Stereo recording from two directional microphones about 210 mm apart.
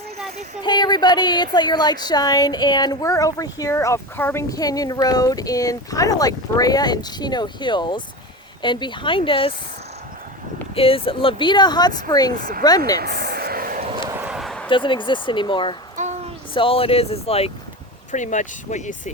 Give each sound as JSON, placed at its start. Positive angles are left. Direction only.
{"t": 0.6, "sound": "a woman's voice", "side_deg": 20}
{"t": 10.8, "sound": "speech", "side_deg": 25}
{"t": 12.4, "sound": "speech", "side_deg": -45}
{"t": 12.6, "sound": "a woman's voice", "side_deg": 20}
{"t": 13.0, "sound": "a sound", "side_deg": -50}
{"t": 14.1, "sound": "a sound", "side_deg": -5}
{"t": 14.7, "sound": "speech", "side_deg": 25}
{"t": 16.0, "sound": "a sound", "side_deg": -35}
{"t": 16.6, "sound": "speech", "side_deg": 25}